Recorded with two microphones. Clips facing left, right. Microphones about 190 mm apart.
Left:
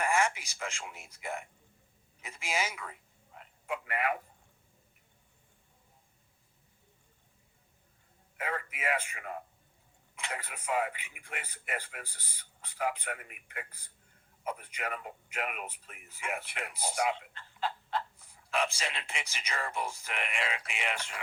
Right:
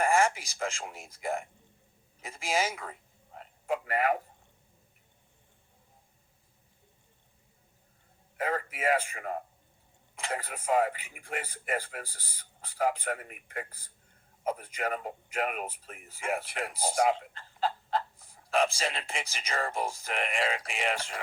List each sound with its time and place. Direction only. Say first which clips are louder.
0.0 s a man's voice: right 4 dB; 35° right (ahead or behind)
8.4 s speech: right 5 dB; 35° right (ahead or behind)